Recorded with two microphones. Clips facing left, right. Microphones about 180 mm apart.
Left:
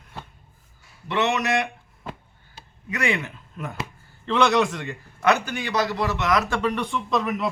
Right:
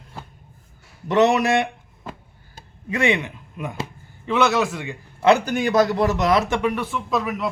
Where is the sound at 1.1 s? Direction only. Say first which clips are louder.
Right 6 dB; 35° right (ahead or behind).